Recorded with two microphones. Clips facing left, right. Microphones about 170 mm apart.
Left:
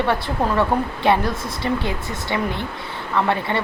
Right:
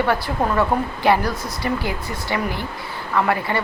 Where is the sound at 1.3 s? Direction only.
25° left (ahead or behind).